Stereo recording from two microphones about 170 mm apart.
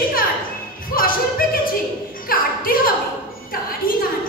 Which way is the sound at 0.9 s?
60° left (ahead or behind).